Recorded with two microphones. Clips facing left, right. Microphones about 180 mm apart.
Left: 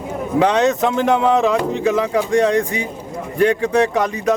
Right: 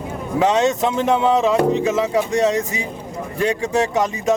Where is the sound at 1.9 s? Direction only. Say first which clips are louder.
Left 1 dB; 25° right (ahead or behind).